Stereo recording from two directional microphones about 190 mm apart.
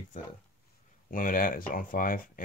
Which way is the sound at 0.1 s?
40° left (ahead or behind).